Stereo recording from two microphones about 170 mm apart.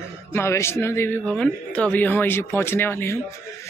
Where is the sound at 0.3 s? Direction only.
15° left (ahead or behind).